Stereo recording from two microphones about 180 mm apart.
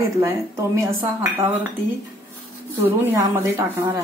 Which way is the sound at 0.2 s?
15° right (ahead or behind).